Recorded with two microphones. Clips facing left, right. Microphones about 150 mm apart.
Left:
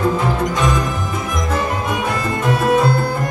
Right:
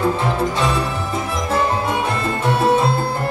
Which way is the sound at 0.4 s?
30° right (ahead or behind).